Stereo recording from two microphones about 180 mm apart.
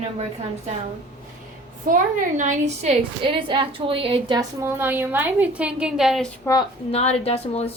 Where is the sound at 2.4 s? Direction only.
40° right (ahead or behind); by 6.3 s centre (ahead or behind).